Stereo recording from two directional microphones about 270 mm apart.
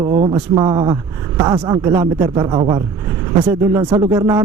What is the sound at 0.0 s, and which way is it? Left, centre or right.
Speech, centre.